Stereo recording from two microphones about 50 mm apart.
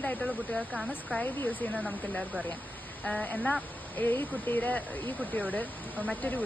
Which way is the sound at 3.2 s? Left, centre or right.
Left.